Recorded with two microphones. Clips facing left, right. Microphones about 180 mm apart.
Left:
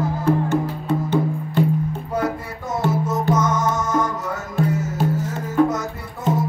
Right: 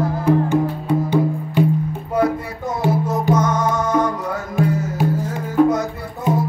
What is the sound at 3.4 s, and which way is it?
Music, 60° right (ahead or behind).